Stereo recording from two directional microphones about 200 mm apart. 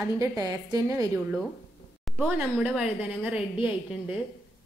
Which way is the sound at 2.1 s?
10° right (ahead or behind).